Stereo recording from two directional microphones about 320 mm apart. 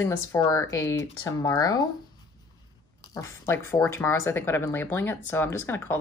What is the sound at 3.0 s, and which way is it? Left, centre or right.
Speech, centre.